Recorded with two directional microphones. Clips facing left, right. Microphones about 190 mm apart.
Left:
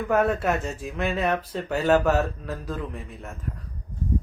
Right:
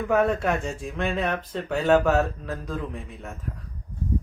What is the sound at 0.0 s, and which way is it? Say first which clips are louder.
Speech: even; centre (ahead or behind).